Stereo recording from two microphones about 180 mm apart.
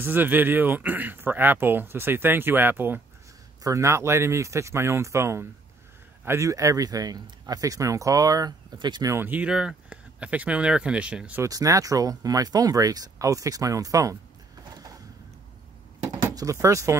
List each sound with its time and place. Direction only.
0.0 s speech: 10° right (ahead or behind)
11.4 s speech: 20° right (ahead or behind)
16.1 s speech: 20° right (ahead or behind)